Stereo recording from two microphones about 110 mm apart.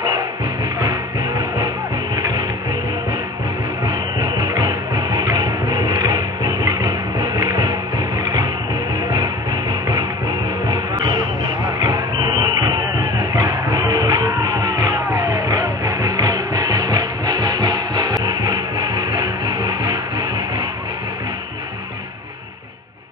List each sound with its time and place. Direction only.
2.1 s music: 40° right (ahead or behind)
3.8 s music: 40° right (ahead or behind)
11.8 s music: 40° right (ahead or behind)